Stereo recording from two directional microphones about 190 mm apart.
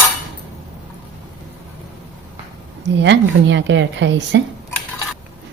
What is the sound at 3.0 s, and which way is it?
A woman's voice, 70° right (ahead or behind).